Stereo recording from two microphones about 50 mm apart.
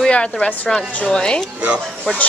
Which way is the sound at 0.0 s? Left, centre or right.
Left.